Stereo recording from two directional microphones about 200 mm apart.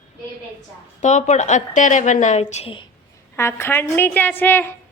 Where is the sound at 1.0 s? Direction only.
35° left (ahead or behind).